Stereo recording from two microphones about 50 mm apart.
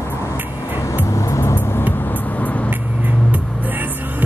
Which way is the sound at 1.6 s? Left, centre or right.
Left.